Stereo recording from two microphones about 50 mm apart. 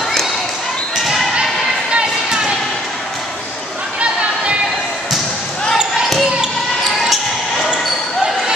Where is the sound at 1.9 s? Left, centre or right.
Right.